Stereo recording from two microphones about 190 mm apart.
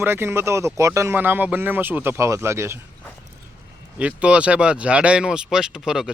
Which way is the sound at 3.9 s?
5° right (ahead or behind).